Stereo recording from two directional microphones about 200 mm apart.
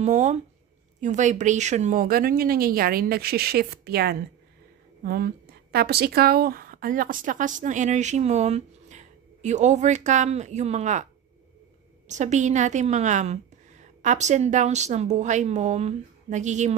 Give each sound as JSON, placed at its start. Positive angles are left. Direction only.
{"t": 0.0, "sound": "a woman's voice", "side_deg": -35}
{"t": 12.1, "sound": "a woman's voice", "side_deg": -35}